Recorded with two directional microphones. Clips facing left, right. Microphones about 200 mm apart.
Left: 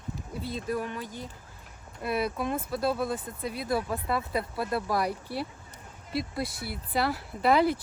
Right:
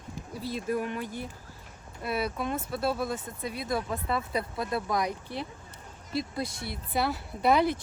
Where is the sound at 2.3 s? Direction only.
Centre (ahead or behind).